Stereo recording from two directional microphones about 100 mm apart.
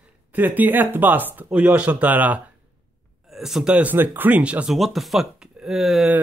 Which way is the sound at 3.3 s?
5° right (ahead or behind).